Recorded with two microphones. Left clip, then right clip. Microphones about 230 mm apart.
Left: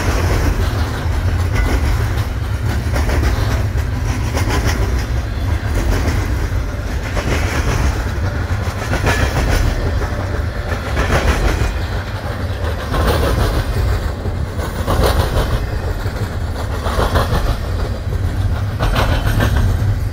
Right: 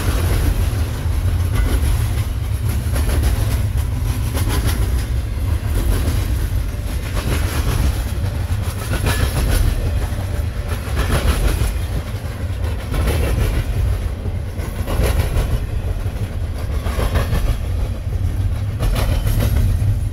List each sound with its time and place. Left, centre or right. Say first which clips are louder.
0.0 s vehicle: left 5 dB; right
4.4 s vehicle: left 5 dB; right
5.8 s vehicle: left 5 dB; right
7.2 s vehicle: left 5 dB; right
8.9 s train: left 6 dB; right
11.0 s vehicle: left 5 dB; right
12.9 s vehicle: left 7 dB; centre
14.9 s vehicle: left 7 dB; centre
16.8 s vehicle: left 7 dB; centre
18.8 s vehicle: left 7 dB; right